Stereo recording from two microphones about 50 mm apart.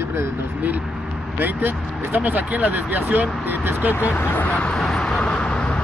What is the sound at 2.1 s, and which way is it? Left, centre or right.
Speech, right.